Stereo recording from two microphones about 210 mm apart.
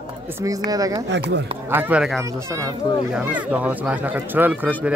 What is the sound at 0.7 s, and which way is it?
Speech, 15° right (ahead or behind).